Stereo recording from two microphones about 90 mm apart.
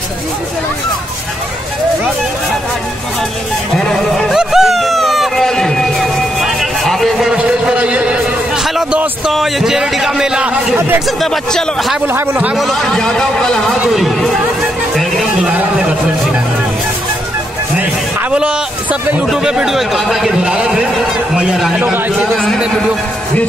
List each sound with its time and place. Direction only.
3.7 s a sound: 5° left (ahead or behind); by 8.2 s 15° right (ahead or behind)
9.3 s a man's voice: centre (ahead or behind)
11.1 s a man's voice: centre (ahead or behind)
15.0 s music: centre (ahead or behind)
18.3 s a man's voice: 15° right (ahead or behind)
21.7 s speech: 15° right (ahead or behind)